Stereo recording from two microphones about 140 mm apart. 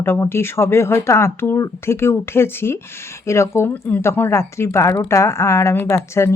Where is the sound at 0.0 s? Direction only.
15° left (ahead or behind).